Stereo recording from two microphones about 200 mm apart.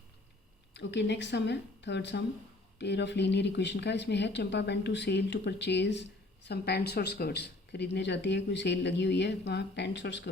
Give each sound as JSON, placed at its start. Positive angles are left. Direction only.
{"t": 0.7, "sound": "speech", "side_deg": 60}